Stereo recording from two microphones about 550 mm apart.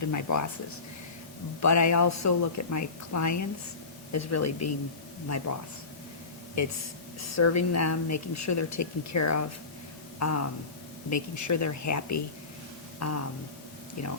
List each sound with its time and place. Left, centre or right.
0.0 s speech: left
1.6 s a woman's voice: left
6.6 s a woman's voice: left